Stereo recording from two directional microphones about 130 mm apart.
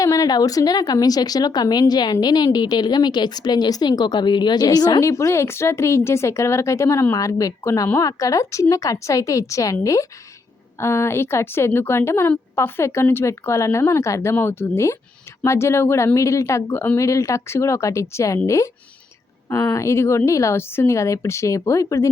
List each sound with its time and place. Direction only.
0.0 s a woman's voice: 25° left (ahead or behind)